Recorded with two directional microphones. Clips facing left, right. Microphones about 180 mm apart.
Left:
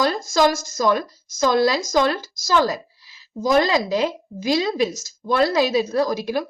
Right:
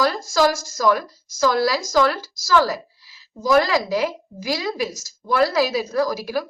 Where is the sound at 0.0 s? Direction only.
20° left (ahead or behind).